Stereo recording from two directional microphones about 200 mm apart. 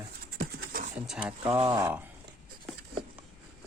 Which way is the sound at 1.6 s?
15° right (ahead or behind).